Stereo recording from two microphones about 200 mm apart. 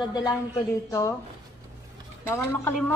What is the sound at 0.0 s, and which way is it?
Speech, 20° left (ahead or behind).